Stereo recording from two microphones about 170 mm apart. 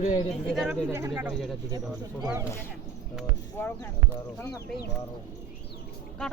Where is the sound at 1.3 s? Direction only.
Centre (ahead or behind).